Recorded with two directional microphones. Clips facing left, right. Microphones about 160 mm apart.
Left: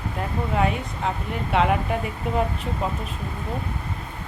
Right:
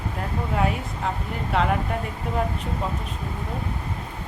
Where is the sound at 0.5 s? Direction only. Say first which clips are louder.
Left 1 dB; centre (ahead or behind).